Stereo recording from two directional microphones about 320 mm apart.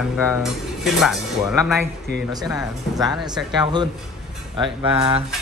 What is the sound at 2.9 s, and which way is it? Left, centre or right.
Speech, centre.